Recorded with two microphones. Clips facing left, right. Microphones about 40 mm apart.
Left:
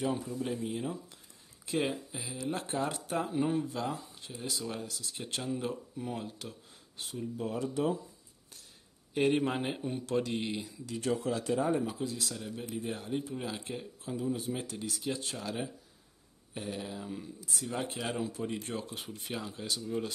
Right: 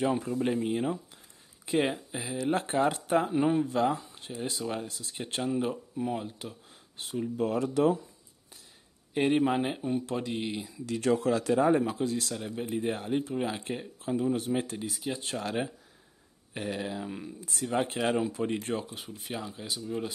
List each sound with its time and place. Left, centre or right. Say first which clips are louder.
0.2 s speech: right 6 dB; right; by 6.5 s centre
7.3 s speech: right 6 dB; right
9.1 s speech: right 3 dB; centre
10.9 s speech: right 6 dB; right
11.9 s speech: right 6 dB; right
12.7 s speech: right 6 dB; right
14.8 s speech: right 1 dB; centre
15.2 s speech: right 5 dB; right
18.9 s speech: right 1 dB; centre